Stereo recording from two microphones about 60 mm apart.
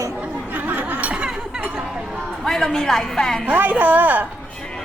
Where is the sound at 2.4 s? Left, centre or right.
Centre.